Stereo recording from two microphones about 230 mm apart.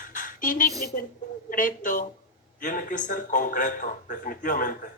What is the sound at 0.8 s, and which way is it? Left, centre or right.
Speech, left.